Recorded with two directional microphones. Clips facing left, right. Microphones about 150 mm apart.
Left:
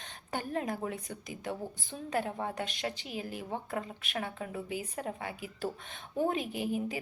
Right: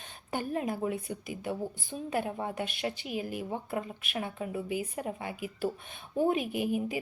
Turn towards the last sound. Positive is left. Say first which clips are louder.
# right 3 dB
turn(degrees=-15)  # may be behind; listen again after turning